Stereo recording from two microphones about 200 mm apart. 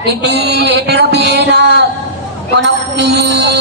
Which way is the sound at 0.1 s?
55° right (ahead or behind).